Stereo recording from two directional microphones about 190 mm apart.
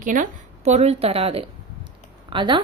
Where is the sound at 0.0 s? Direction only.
45° right (ahead or behind).